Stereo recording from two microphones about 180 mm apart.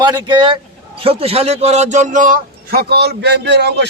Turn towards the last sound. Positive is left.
turn(degrees=-70)  # may be behind; listen again after turning